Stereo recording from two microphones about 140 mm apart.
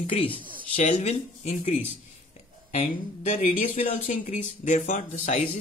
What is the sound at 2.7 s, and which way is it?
Speech, 50° left (ahead or behind).